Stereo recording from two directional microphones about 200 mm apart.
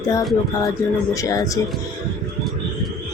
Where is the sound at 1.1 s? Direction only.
15° left (ahead or behind).